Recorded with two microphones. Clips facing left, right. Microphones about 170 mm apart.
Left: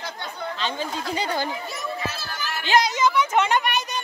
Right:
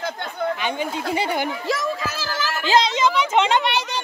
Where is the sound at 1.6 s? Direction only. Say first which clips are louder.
Right 6 dB; 90° right.